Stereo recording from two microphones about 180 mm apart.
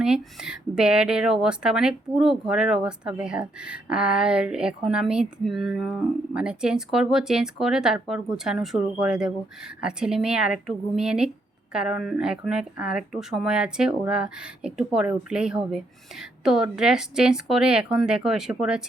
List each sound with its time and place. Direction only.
0.0 s a woman's voice: 5° right (ahead or behind)